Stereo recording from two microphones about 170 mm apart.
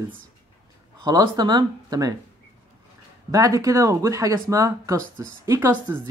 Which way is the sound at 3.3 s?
20° right (ahead or behind).